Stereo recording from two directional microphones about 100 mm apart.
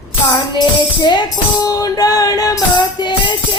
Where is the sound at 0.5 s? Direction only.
45° left (ahead or behind).